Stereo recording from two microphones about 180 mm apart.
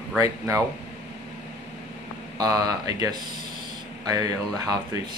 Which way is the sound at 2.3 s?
20° right (ahead or behind).